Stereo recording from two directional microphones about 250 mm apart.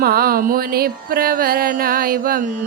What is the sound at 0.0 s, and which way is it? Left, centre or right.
Music, right.